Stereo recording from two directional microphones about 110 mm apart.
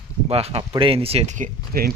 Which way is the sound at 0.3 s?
65° right (ahead or behind).